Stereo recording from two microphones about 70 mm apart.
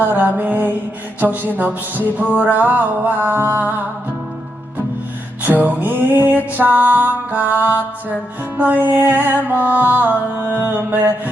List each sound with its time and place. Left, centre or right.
0.0 s music: right
5.4 s music: right